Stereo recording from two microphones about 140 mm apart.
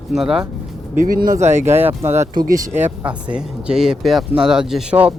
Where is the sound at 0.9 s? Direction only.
80° right.